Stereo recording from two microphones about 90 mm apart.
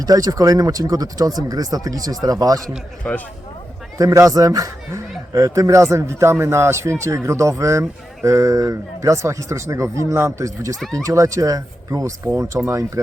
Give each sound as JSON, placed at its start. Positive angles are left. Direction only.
{"t": 0.0, "sound": "speech", "side_deg": -45}
{"t": 3.1, "sound": "speech", "side_deg": 15}
{"t": 3.9, "sound": "speech", "side_deg": -35}